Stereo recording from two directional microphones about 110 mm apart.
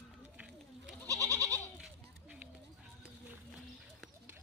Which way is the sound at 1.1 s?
30° right (ahead or behind).